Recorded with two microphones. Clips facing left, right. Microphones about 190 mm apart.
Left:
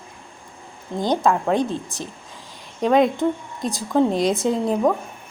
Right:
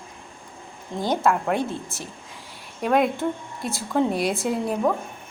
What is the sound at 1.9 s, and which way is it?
Speech, 15° left (ahead or behind).